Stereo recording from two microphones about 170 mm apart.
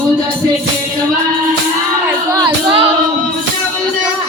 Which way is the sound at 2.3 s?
25° right (ahead or behind).